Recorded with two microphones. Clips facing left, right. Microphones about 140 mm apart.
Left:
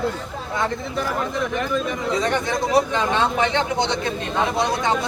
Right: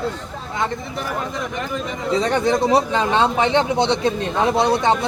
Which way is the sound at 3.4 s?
30° right (ahead or behind).